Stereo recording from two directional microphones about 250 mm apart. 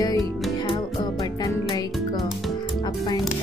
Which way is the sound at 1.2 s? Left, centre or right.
Centre.